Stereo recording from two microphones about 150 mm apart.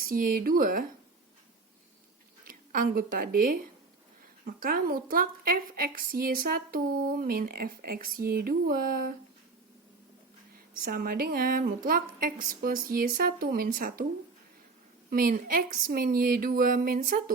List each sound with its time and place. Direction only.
0.0 s a woman's voice: 70° right (ahead or behind)
2.4 s a woman's voice: 70° right (ahead or behind)
10.8 s a woman's voice: 85° right; by 14.0 s 65° right (ahead or behind)
15.1 s a woman's voice: 70° right (ahead or behind)